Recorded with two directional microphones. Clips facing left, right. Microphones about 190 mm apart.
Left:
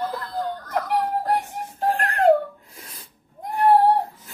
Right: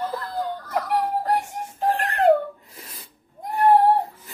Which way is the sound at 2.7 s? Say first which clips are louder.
Right 1 dB; centre (ahead or behind).